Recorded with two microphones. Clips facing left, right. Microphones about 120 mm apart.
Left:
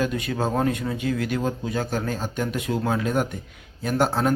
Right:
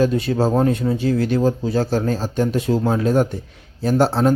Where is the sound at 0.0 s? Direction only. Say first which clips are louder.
Right 7 dB; 30° right (ahead or behind).